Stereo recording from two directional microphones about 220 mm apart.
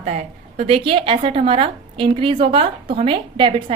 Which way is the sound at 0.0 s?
30° right (ahead or behind).